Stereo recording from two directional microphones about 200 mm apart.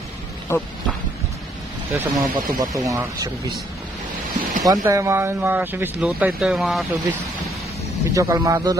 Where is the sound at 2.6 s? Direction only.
15° right (ahead or behind).